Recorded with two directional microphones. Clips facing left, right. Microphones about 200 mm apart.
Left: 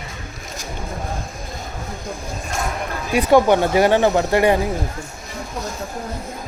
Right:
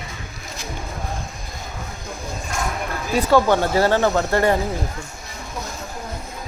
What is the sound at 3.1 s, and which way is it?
Speech, 15° left (ahead or behind).